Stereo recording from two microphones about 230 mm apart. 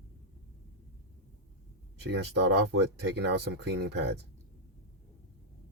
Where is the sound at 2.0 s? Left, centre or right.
Right.